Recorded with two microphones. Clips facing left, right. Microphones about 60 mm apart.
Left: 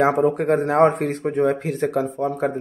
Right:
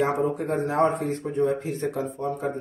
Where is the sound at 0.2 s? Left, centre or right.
Left.